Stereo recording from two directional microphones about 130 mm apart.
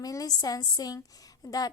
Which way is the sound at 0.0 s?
30° left (ahead or behind).